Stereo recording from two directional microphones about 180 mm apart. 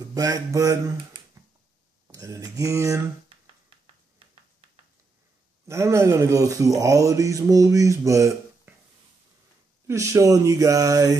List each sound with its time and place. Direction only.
0.0 s speech: 20° right (ahead or behind)
5.7 s speech: 15° right (ahead or behind)
9.8 s speech: 15° right (ahead or behind)